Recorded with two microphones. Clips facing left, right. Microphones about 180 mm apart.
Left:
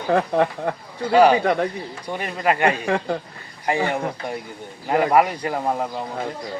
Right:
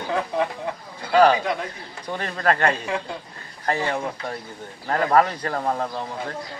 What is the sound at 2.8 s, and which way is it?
Speech, 60° left (ahead or behind).